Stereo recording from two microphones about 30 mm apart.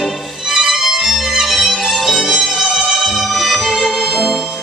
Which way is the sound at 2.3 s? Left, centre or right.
Right.